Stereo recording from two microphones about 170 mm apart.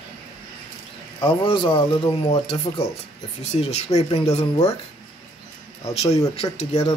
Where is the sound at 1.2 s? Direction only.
30° left (ahead or behind).